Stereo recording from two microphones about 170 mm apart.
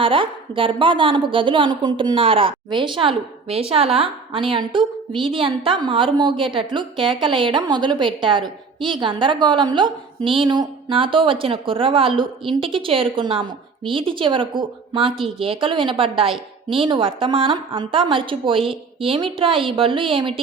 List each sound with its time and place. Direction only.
0.0 s a woman's voice: 30° right (ahead or behind)